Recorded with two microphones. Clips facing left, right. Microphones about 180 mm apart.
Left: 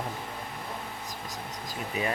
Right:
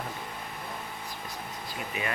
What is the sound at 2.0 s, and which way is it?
Speech, 40° left (ahead or behind).